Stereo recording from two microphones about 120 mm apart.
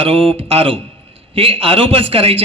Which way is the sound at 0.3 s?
55° right (ahead or behind).